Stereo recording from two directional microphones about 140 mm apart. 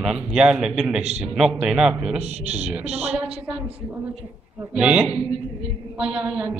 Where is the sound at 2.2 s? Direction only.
50° right (ahead or behind).